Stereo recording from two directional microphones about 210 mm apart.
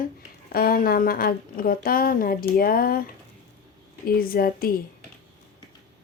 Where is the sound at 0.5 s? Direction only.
45° left (ahead or behind).